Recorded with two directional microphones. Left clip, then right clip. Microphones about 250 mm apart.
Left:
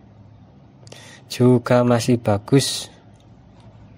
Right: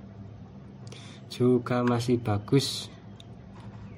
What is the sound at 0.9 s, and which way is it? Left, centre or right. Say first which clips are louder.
Speech: left 10 dB; left.